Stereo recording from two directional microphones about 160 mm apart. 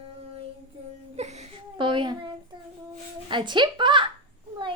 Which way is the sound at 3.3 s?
30° right (ahead or behind).